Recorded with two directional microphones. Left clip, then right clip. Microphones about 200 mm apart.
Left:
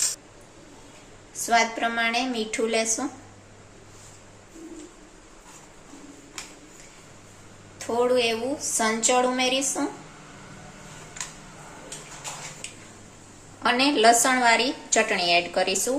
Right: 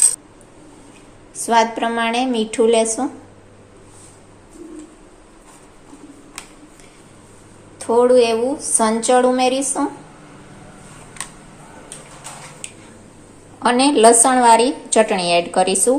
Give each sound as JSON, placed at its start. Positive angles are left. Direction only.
{"t": 1.5, "sound": "a woman's voice", "side_deg": -25}
{"t": 7.8, "sound": "a woman's voice", "side_deg": -30}
{"t": 13.6, "sound": "a woman's voice", "side_deg": -25}